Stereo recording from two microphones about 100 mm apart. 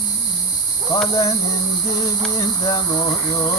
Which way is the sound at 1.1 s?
35° left (ahead or behind).